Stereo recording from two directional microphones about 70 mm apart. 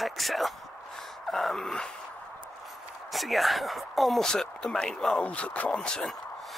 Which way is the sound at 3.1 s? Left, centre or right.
Centre.